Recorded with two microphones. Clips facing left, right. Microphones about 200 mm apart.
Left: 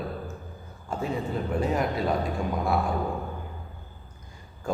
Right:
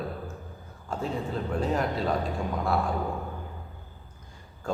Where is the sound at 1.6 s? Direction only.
10° left (ahead or behind).